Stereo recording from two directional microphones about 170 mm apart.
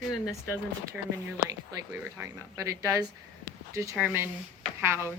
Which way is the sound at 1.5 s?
20° right (ahead or behind).